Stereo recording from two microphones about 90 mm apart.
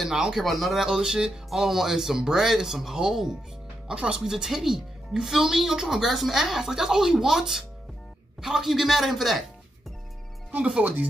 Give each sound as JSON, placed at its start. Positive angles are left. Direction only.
{"t": 0.0, "sound": "a woman's voice", "side_deg": -5}
{"t": 10.5, "sound": "speech", "side_deg": -15}